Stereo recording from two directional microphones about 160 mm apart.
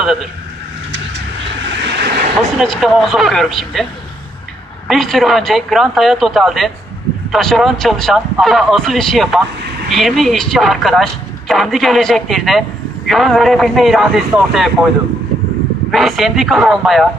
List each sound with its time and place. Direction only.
0.0 s speech: centre (ahead or behind)
1.8 s vehicle: 90° right
2.6 s speech: centre (ahead or behind)
4.9 s speech: centre (ahead or behind)
15.9 s speech: centre (ahead or behind)